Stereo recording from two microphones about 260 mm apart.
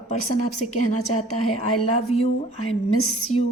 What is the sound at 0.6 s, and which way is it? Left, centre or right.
A woman's voice, left.